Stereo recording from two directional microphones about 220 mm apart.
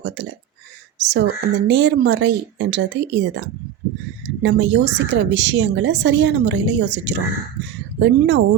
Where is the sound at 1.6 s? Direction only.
55° right (ahead or behind).